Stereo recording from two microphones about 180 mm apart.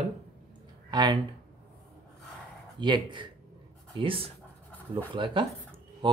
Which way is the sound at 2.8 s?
25° right (ahead or behind).